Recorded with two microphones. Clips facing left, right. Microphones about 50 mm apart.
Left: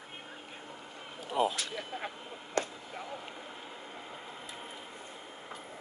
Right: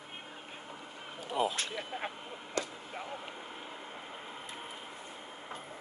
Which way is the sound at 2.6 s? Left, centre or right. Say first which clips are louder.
Left 3 dB; left.